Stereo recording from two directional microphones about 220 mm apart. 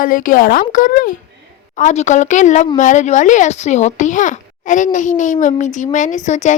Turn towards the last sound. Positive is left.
turn(degrees=35)  # may be behind; listen again after turning